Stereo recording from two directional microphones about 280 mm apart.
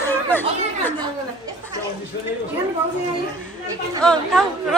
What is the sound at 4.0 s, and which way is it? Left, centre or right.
Speech, centre.